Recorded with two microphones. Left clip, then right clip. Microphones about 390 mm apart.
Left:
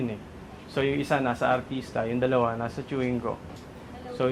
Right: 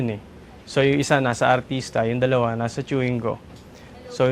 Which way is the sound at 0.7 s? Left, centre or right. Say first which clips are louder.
Right 7 dB; right.